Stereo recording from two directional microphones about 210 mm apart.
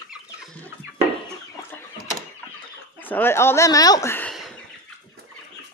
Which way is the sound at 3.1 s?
10° left (ahead or behind).